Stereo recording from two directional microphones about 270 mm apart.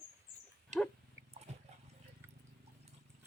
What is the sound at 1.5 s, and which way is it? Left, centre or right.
Dog, right.